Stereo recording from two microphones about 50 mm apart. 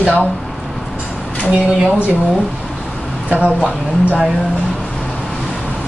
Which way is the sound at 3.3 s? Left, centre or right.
Right.